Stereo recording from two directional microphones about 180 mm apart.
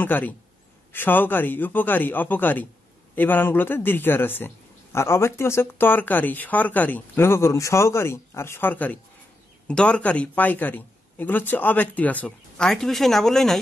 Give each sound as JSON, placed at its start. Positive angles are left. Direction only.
{"t": 0.0, "sound": "speech", "side_deg": 10}